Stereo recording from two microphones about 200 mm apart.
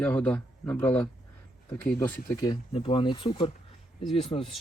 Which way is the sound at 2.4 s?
25° left (ahead or behind).